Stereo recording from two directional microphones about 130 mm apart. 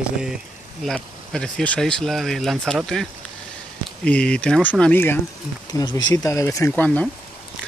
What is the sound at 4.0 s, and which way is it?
Speech, 10° left (ahead or behind).